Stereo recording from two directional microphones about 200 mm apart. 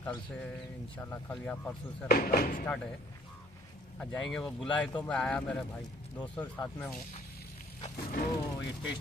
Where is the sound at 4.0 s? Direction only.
5° left (ahead or behind).